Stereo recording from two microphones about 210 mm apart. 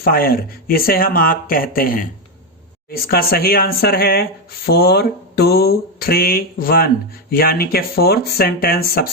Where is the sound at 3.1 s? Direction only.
45° left (ahead or behind).